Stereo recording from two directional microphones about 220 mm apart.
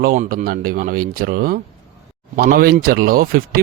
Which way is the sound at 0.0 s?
40° right (ahead or behind).